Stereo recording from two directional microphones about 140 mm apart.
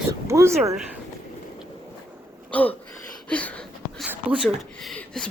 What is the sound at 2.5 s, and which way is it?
Throat clearing, 10° left (ahead or behind).